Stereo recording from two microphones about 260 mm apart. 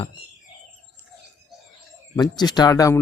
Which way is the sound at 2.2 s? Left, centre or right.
Centre.